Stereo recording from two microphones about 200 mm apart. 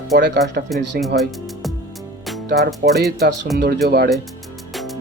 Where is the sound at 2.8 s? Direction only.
50° right (ahead or behind).